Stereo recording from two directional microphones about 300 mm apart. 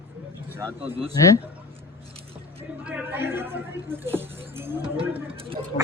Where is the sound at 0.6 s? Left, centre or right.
Centre.